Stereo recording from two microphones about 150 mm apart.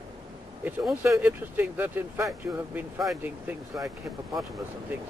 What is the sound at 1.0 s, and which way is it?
Speech, 10° right (ahead or behind).